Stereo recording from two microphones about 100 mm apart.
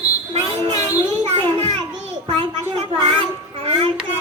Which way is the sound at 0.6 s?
90° right.